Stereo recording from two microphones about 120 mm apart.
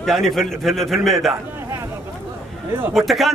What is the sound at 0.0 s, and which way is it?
A man's voice, centre (ahead or behind).